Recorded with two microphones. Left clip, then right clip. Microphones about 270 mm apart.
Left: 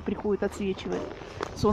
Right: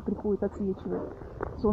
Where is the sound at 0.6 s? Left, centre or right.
Centre.